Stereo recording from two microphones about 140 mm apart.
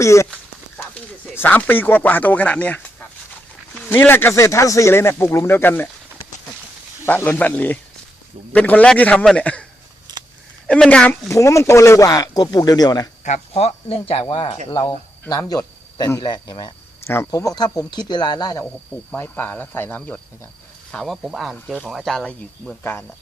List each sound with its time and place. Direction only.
0.0 s speech: 20° left (ahead or behind)
7.0 s speech: 15° left (ahead or behind)
10.7 s speech: 5° left (ahead or behind)
11.3 s speech: 20° left (ahead or behind)
13.2 s speech: 50° left (ahead or behind); by 16.7 s 30° left (ahead or behind)
17.1 s speech: 20° left (ahead or behind)
19.1 s speech: 15° left (ahead or behind)
22.8 s speech: 15° left (ahead or behind)